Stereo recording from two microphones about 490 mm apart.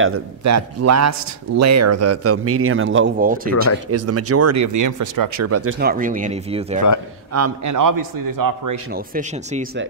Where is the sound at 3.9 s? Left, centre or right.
Right; by 6.8 s centre.